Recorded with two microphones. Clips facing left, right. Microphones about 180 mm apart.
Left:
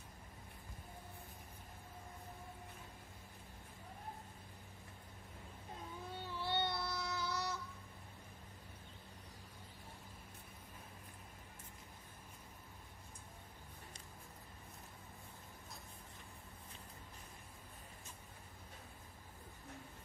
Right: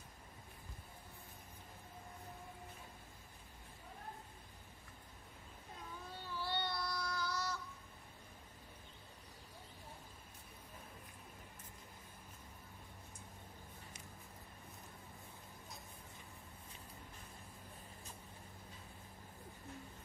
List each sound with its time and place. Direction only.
6.3 s child singing: 25° left (ahead or behind)